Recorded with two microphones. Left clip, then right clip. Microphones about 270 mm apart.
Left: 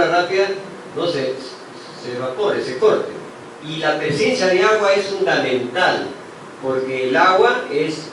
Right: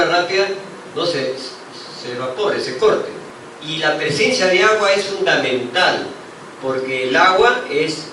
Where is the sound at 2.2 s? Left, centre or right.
Centre.